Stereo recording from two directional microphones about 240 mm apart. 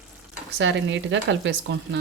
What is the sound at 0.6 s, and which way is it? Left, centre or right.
Speech, right.